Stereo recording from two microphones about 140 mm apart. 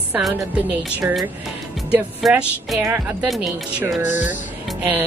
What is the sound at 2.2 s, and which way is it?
Speech, centre (ahead or behind).